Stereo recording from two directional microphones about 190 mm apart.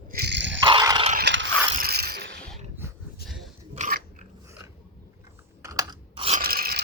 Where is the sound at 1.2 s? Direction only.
75° right (ahead or behind).